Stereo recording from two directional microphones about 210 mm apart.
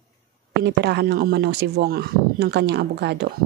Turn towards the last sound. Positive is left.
turn(degrees=-50)  # may be behind; listen again after turning